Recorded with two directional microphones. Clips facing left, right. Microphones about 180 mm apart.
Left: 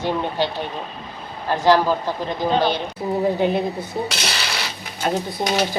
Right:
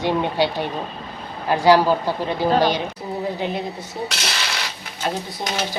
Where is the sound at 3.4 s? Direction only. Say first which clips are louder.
Left 6 dB; 50° left (ahead or behind).